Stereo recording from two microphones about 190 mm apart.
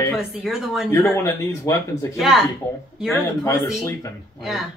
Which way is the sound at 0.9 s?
15° left (ahead or behind).